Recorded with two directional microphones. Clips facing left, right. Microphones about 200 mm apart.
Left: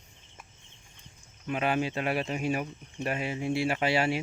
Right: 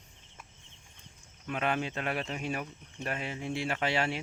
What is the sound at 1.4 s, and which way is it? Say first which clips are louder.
Speech: left 3 dB; 5° left (ahead or behind).